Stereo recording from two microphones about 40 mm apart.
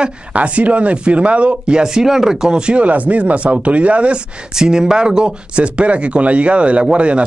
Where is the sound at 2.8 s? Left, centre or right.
Right.